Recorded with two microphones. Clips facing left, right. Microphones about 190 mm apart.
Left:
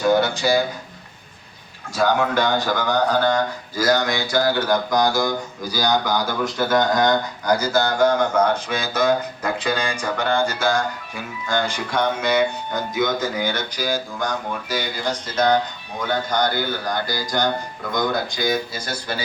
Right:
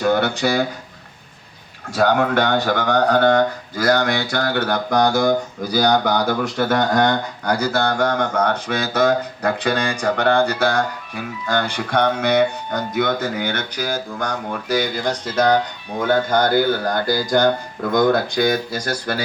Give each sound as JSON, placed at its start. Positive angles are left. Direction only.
{"t": 0.0, "sound": "speech", "side_deg": -60}
{"t": 2.0, "sound": "speech", "side_deg": -60}
{"t": 16.0, "sound": "speech", "side_deg": -55}